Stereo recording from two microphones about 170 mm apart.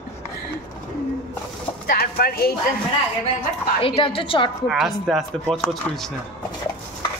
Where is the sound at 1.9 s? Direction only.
65° left (ahead or behind).